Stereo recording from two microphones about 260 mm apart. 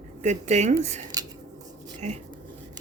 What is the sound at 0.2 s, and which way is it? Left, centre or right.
Speech, right.